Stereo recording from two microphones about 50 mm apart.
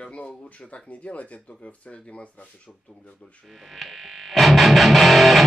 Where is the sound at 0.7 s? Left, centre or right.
Left.